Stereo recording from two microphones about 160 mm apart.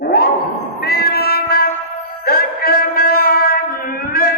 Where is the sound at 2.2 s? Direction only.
70° left (ahead or behind).